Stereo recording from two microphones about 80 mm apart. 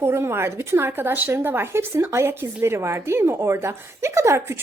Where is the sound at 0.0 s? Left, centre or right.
Right.